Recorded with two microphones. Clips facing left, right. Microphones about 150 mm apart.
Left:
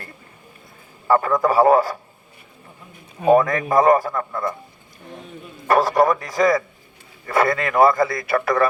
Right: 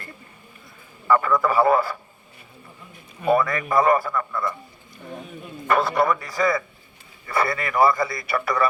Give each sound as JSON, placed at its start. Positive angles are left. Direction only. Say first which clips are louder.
{"t": 1.0, "sound": "a man's voice", "louder": "left 2 dB", "side_deg": 40}
{"t": 3.2, "sound": "a man's voice", "louder": "left 5 dB", "side_deg": 45}
{"t": 5.6, "sound": "a man's voice", "louder": "left 4 dB", "side_deg": 40}
{"t": 7.3, "sound": "speech", "louder": "left 5 dB", "side_deg": 90}
{"t": 7.7, "sound": "a man's voice", "louder": "left 3 dB", "side_deg": 50}